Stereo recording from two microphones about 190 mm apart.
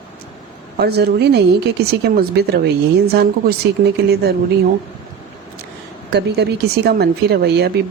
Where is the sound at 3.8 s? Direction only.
60° right (ahead or behind).